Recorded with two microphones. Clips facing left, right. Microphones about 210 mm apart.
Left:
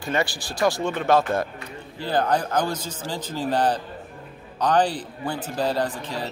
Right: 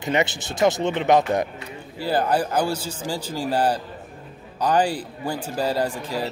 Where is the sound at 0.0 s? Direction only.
20° right (ahead or behind).